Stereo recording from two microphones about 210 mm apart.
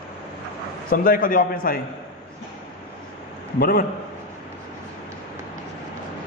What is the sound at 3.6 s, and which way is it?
Speech, 45° left (ahead or behind).